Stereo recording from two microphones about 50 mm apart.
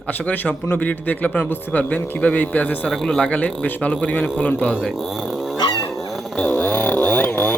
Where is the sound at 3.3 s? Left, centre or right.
Left.